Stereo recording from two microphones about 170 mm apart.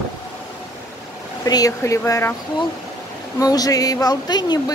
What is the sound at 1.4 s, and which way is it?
Speech, 20° left (ahead or behind).